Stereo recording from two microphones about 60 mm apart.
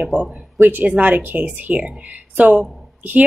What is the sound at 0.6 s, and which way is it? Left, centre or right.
A woman's voice, right.